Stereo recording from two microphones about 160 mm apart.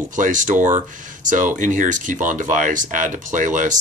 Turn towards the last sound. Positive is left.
turn(degrees=-50)  # may be behind; listen again after turning